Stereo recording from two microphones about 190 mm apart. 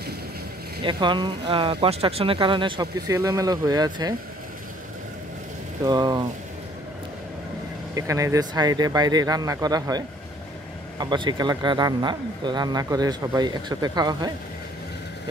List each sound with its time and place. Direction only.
0.8 s speech: 25° right (ahead or behind)
5.9 s speech: 20° right (ahead or behind)
7.9 s speech: 15° right (ahead or behind)